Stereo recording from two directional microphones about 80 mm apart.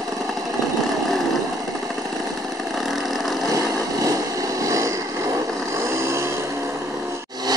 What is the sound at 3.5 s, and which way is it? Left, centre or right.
Vehicle, right.